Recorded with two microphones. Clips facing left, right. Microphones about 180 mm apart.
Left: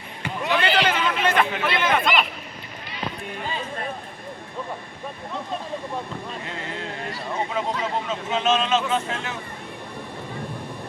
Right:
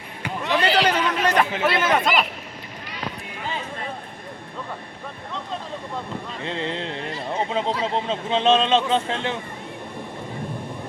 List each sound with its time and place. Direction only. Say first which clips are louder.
0.5 s a sound: right 2 dB; 40° right (ahead or behind)
1.6 s speech: right 2 dB; 40° right (ahead or behind)
6.4 s speech: right 5 dB; 25° right (ahead or behind)